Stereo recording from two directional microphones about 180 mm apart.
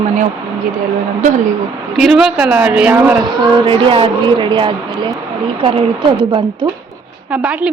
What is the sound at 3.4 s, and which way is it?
A woman's voice, 25° right (ahead or behind).